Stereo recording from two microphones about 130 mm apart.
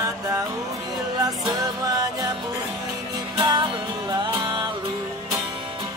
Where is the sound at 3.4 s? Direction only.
30° right (ahead or behind).